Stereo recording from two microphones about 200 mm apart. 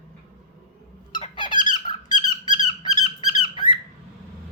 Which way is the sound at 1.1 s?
20° left (ahead or behind).